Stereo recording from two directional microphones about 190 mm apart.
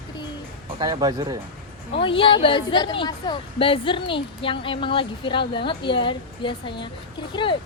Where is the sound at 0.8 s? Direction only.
20° right (ahead or behind).